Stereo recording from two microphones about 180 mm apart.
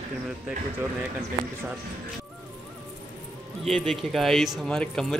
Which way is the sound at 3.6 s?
Centre (ahead or behind).